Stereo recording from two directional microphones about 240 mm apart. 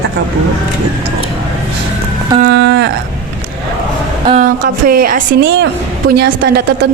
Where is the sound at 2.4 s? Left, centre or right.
Right.